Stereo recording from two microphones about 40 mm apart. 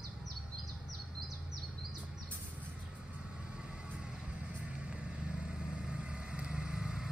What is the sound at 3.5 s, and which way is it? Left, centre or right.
Vehicle, right.